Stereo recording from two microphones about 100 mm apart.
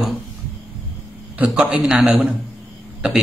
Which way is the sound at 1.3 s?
10° right (ahead or behind).